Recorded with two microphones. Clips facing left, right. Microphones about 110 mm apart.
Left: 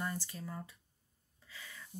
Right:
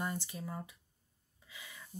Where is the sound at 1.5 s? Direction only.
15° right (ahead or behind).